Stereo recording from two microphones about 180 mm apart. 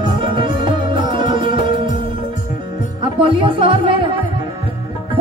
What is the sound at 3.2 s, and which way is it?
Music, 30° right (ahead or behind).